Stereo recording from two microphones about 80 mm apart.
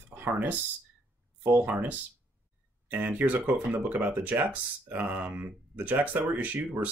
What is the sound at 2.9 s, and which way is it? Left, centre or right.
Speech, right.